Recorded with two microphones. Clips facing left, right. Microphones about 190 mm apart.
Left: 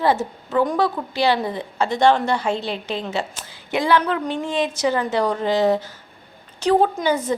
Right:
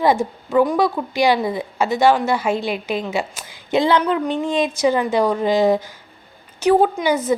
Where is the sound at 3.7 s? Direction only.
20° right (ahead or behind).